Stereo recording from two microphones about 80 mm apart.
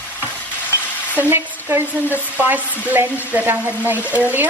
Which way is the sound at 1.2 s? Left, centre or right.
Right.